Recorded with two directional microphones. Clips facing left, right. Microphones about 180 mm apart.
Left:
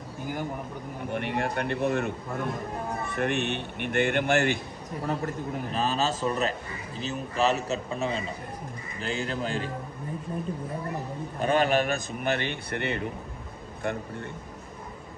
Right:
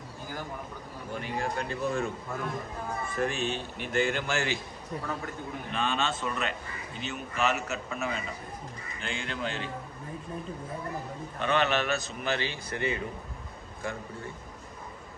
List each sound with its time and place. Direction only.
1.1 s a man's voice: 65° left (ahead or behind)
5.0 s a man's voice: 35° left (ahead or behind)
11.3 s a man's voice: 40° left (ahead or behind); by 14.0 s 65° left (ahead or behind)